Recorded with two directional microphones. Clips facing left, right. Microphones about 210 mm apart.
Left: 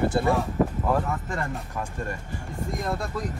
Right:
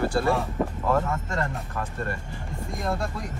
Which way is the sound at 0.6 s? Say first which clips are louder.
Left 3 dB; centre (ahead or behind).